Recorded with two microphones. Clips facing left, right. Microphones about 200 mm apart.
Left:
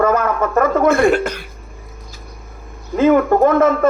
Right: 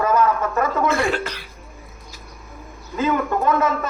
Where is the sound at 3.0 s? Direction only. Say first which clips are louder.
Left 9 dB; 55° left (ahead or behind).